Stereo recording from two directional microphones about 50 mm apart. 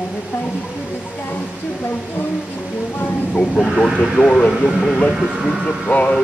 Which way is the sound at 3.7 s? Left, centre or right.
Centre.